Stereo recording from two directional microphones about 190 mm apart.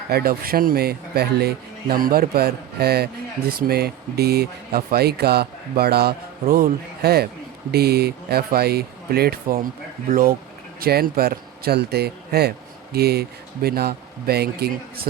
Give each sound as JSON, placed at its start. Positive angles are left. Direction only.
{"t": 0.1, "sound": "speech", "side_deg": -55}